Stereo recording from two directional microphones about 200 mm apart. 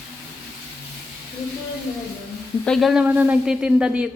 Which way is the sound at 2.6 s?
Centre (ahead or behind).